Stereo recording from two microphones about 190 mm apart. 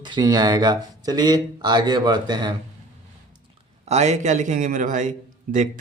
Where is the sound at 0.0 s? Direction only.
20° right (ahead or behind).